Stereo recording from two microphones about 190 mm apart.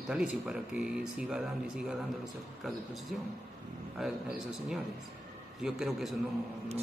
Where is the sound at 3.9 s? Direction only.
Centre (ahead or behind).